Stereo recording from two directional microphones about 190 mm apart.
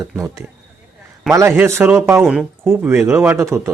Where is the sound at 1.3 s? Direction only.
15° right (ahead or behind).